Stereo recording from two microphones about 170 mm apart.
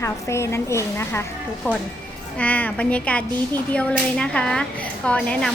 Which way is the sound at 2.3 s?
10° left (ahead or behind).